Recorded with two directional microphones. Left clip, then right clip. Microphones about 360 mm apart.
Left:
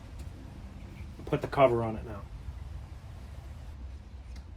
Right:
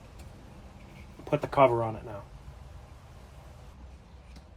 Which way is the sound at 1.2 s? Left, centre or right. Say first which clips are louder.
Right 2 dB; centre.